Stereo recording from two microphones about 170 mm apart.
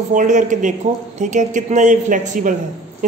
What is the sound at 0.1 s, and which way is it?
A man's voice, 50° right (ahead or behind).